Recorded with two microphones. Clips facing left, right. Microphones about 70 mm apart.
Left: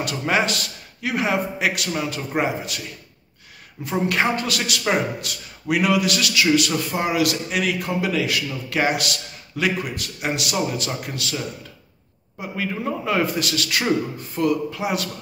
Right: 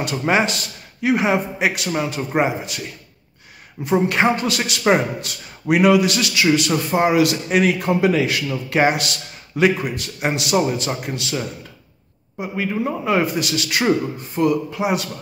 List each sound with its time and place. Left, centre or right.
0.0 s a man's voice: right
3.8 s a man's voice: right